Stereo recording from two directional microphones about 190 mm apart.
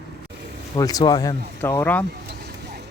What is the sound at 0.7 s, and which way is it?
Speech, 20° left (ahead or behind).